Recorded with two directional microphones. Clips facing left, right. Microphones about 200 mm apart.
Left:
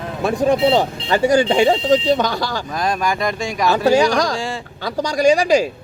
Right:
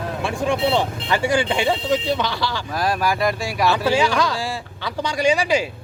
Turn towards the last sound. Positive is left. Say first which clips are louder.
# left 5 dB
turn(degrees=40)  # may be behind; listen again after turning